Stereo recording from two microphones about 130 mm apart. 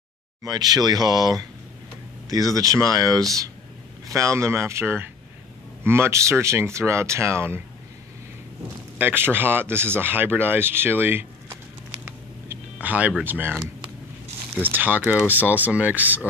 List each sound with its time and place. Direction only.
0.4 s speech: 30° right (ahead or behind)
8.9 s speech: 15° right (ahead or behind)
12.0 s a sound: 15° right (ahead or behind)
13.2 s speech: 15° right (ahead or behind)